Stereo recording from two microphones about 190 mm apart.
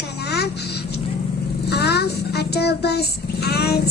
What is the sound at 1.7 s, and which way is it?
Speech, 60° left (ahead or behind).